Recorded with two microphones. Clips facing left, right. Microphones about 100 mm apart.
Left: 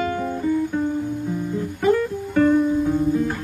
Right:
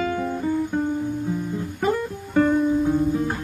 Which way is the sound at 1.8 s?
20° right (ahead or behind).